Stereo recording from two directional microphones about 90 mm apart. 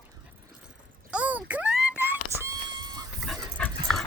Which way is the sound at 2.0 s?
30° right (ahead or behind).